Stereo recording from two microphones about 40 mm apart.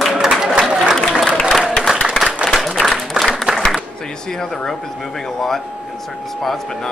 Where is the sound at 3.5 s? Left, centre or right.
Right.